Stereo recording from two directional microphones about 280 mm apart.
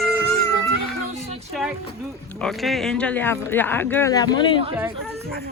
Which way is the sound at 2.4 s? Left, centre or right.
Centre.